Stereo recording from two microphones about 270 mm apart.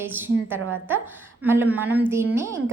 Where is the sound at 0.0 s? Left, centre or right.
Centre.